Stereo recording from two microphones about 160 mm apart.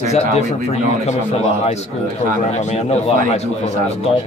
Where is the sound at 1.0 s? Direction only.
40° left (ahead or behind).